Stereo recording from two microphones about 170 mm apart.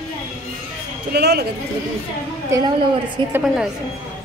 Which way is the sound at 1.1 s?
70° right (ahead or behind).